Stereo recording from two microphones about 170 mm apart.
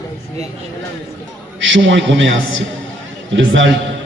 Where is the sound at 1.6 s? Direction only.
90° right.